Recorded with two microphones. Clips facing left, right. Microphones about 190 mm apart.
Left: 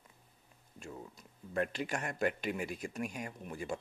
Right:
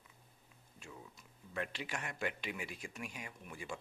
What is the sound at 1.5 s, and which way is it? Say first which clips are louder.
Speech: left 7 dB; 45° left (ahead or behind).